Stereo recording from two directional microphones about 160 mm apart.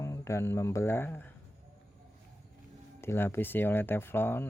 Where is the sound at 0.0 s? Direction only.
20° left (ahead or behind).